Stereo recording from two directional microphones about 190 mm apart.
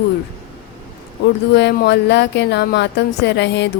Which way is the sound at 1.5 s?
65° left (ahead or behind).